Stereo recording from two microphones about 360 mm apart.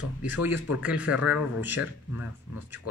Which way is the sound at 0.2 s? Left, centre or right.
Centre.